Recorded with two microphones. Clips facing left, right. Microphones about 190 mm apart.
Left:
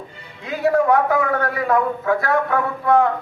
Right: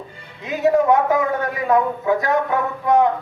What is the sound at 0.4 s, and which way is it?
A man's voice, 20° right (ahead or behind).